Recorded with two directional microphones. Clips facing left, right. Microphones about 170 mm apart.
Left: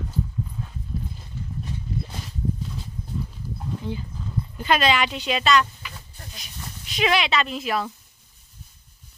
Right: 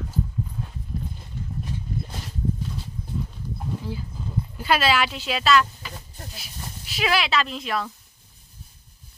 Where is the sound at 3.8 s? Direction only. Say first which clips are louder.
Left 1 dB; 5° right (ahead or behind).